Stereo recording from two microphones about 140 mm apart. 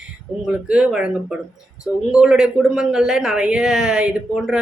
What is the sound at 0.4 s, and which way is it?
Speech, 5° right (ahead or behind).